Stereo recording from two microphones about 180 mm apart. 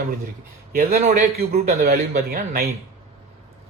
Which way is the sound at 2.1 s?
45° right (ahead or behind).